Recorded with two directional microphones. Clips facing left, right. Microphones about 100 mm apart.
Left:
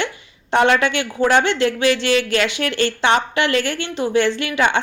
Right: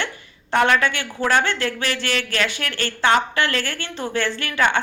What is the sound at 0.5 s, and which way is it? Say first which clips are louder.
A woman's voice: left 3 dB; 20° left (ahead or behind).